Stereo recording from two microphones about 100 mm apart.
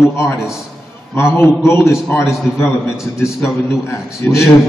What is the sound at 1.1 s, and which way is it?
Speech, 25° left (ahead or behind).